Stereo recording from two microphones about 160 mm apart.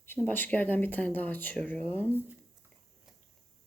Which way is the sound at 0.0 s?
15° left (ahead or behind).